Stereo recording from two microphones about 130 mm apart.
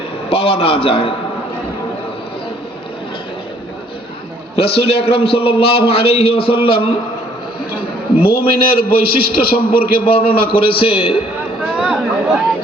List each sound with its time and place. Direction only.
0.3 s a man's voice: 45° left (ahead or behind)
4.5 s a man's voice: 45° left (ahead or behind)
8.2 s a man's voice: 45° left (ahead or behind)
11.8 s chatter: 5° right (ahead or behind)